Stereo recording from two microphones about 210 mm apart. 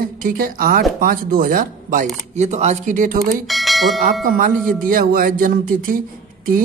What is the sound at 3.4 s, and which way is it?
Speech, centre (ahead or behind).